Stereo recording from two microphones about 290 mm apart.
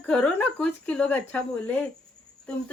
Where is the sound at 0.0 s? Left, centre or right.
Centre.